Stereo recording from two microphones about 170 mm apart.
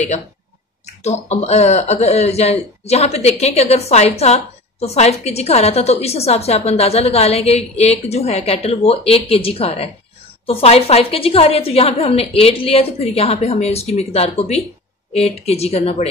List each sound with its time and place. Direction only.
1.0 s speech: 40° left (ahead or behind)